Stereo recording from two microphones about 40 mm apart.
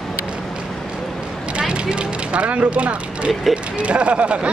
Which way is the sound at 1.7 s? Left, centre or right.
Right.